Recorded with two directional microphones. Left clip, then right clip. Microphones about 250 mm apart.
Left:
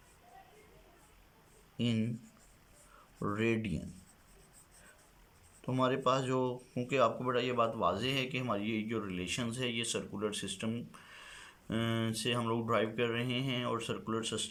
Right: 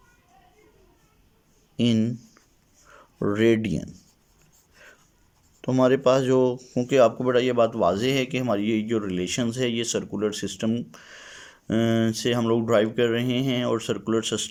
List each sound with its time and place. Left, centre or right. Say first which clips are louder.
1.7 s speech: right 12 dB; right
3.2 s speech: right 13 dB; right
5.6 s speech: right 12 dB; right